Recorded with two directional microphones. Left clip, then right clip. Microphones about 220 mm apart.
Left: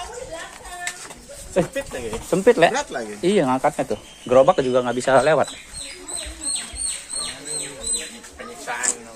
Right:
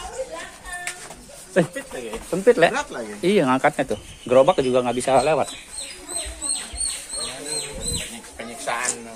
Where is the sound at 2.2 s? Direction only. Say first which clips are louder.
Left 1 dB; 25° left (ahead or behind).